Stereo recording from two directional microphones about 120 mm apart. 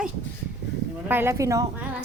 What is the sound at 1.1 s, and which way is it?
Speech, 20° right (ahead or behind).